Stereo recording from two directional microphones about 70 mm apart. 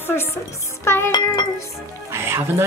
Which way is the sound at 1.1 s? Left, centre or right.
Left.